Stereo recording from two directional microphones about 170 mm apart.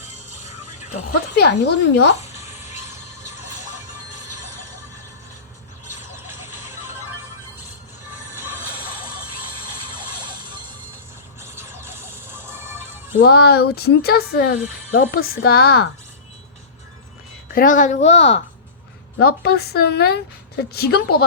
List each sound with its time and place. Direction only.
1.4 s speech: 75° left (ahead or behind)
6.1 s vehicle: 15° right (ahead or behind)
10.0 s a sound: 25° right (ahead or behind)
11.3 s music: 15° right (ahead or behind)
13.2 s a woman's voice: 70° left (ahead or behind)
17.5 s a woman's voice: 55° left (ahead or behind)
19.2 s speech: 70° left (ahead or behind)